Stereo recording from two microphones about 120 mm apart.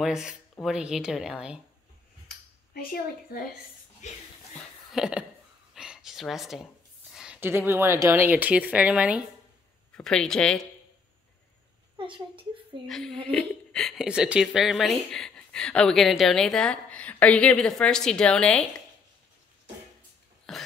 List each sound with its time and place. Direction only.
0.0 s speech: 5° right (ahead or behind)
4.0 s speech: 75° left (ahead or behind)
4.9 s speech: 5° right (ahead or behind)
5.8 s a sound: 5° right (ahead or behind)
7.3 s speech: 20° right (ahead or behind)
9.9 s speech: 5° left (ahead or behind)
12.0 s a woman's voice: 45° right (ahead or behind)
12.8 s speech: 5° left (ahead or behind)
14.0 s speech: 5° right (ahead or behind)
20.5 s cough: centre (ahead or behind)